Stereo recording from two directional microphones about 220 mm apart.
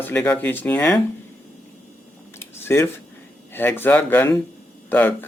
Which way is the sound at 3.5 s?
10° left (ahead or behind).